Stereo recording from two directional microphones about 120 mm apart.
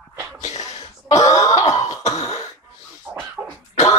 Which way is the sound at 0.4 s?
70° left (ahead or behind).